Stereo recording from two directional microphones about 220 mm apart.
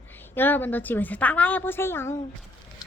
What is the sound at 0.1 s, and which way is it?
A woman's voice, 10° left (ahead or behind).